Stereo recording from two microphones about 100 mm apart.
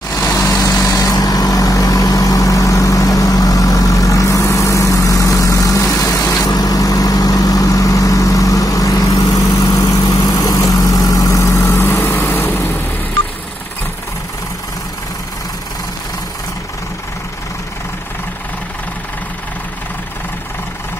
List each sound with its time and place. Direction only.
0.1 s vehicle: 35° left (ahead or behind)